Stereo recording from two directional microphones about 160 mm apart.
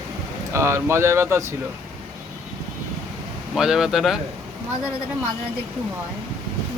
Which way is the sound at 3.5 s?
5° right (ahead or behind).